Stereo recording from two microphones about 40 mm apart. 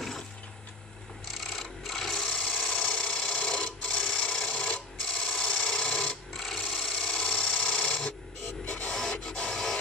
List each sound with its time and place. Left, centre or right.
1.2 s a sound: centre
2.8 s sewing machine: left
4.0 s printer: centre
4.9 s a sound: centre
6.3 s wood: centre
8.6 s rub: left
8.9 s rub: centre
9.2 s printer: left
9.5 s printer: centre